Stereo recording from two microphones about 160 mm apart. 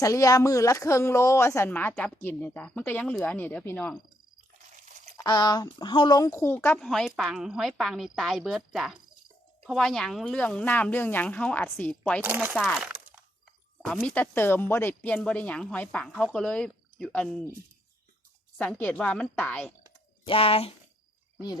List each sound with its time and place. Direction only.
0.0 s speech: 20° left (ahead or behind)
4.8 s a sound: 55° right (ahead or behind)
5.1 s speech: 25° left (ahead or behind); by 12.2 s 5° left (ahead or behind)
12.2 s speech: 15° right (ahead or behind)
12.6 s a sound: centre (ahead or behind)
13.8 s speech: 5° left (ahead or behind)
18.5 s speech: 10° left (ahead or behind)
20.2 s speech: 35° left (ahead or behind)